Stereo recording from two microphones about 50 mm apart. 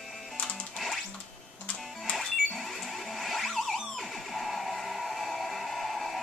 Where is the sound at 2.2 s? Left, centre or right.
Centre.